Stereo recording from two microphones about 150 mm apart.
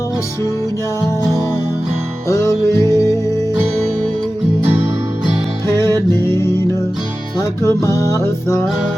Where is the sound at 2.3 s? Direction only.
20° left (ahead or behind).